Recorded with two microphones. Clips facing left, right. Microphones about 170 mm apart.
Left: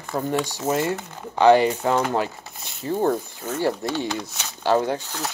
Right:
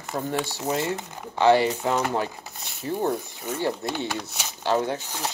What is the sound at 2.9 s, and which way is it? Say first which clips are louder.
Speech: left 3 dB; 35° left (ahead or behind).